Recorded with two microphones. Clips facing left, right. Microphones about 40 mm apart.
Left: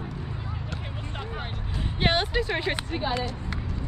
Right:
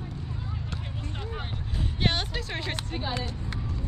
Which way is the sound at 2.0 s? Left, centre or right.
Centre.